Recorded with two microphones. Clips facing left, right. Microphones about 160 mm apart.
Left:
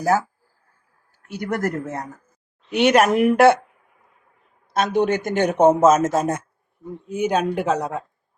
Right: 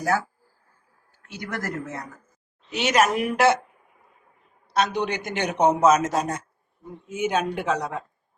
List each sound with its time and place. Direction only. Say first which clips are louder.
1.3 s a man's voice: left 7 dB; 55° left (ahead or behind)
2.6 s speech: left 5 dB; 60° left (ahead or behind)
4.7 s a man's voice: left 5 dB; 50° left (ahead or behind)
7.1 s speech: left 4 dB; 40° left (ahead or behind)